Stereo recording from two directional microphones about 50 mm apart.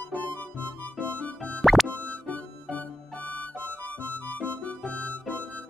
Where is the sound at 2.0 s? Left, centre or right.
Left.